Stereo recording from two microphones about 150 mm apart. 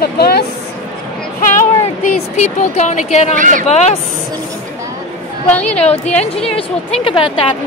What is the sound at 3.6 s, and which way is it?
Speech, 45° left (ahead or behind).